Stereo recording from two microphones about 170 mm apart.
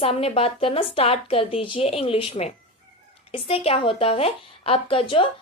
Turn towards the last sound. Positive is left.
turn(degrees=30)  # may be behind; listen again after turning